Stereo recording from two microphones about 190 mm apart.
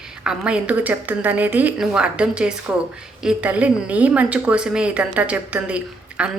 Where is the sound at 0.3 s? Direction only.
5° right (ahead or behind).